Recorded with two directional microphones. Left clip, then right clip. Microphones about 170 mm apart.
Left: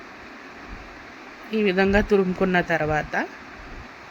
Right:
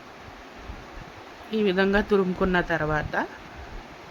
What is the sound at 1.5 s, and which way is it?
Speech, 45° right (ahead or behind).